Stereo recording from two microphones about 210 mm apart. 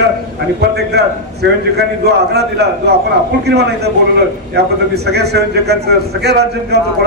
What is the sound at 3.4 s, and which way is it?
Speech, 50° right (ahead or behind).